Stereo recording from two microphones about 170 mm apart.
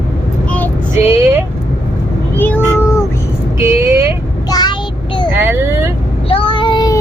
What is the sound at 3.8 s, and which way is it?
Vehicle, 15° right (ahead or behind).